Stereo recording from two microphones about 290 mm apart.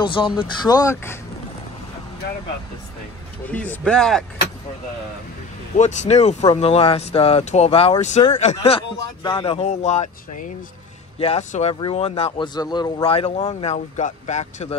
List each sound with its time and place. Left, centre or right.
0.0 s speech: centre
3.4 s speech: centre
5.8 s speech: left
11.1 s speech: left